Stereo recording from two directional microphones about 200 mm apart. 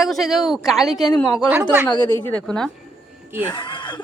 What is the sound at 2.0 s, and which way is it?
Speech, 10° left (ahead or behind).